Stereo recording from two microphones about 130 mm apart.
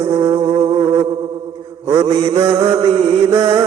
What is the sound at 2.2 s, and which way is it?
Music, 55° right (ahead or behind).